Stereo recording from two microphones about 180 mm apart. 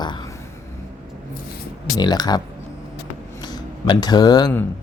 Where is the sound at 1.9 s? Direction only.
20° left (ahead or behind).